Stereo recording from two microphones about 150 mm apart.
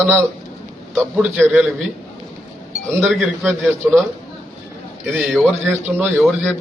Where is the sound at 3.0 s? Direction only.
Centre (ahead or behind).